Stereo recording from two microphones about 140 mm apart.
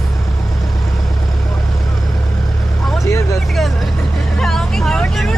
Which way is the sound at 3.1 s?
20° left (ahead or behind).